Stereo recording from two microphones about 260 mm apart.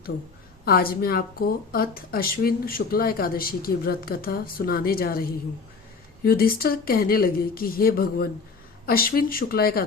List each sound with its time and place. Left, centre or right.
0.6 s speech: left
6.2 s speech: left